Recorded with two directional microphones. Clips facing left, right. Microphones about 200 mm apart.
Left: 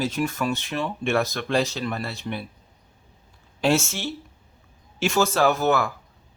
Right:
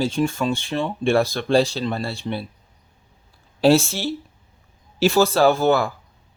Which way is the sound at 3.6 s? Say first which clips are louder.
Right 6 dB; 35° right (ahead or behind).